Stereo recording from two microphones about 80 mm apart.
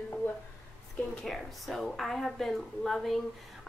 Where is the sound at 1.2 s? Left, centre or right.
Centre.